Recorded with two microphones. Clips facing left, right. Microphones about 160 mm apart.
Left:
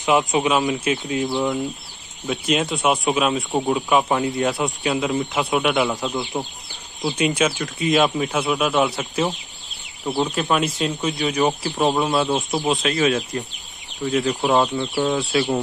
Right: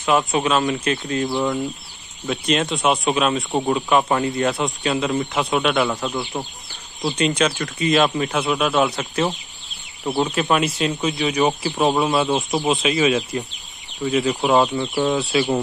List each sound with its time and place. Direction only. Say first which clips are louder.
0.0 s speech: left 1 dB; 15° left (ahead or behind)
0.6 s speech: even; centre (ahead or behind)
6.3 s speech: left 1 dB; 20° left (ahead or behind)
7.1 s speech: even; 5° left (ahead or behind)